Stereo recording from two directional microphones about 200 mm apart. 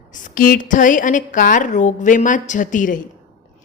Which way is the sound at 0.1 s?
40° left (ahead or behind).